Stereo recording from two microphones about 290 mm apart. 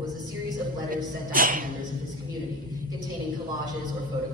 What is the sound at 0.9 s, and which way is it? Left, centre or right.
Speech, right.